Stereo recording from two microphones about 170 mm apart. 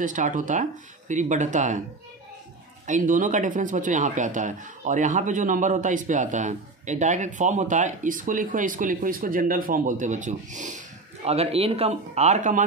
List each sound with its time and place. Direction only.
0.0 s speech: 50° right (ahead or behind)
2.9 s speech: 50° right (ahead or behind)
11.2 s speech: 35° right (ahead or behind)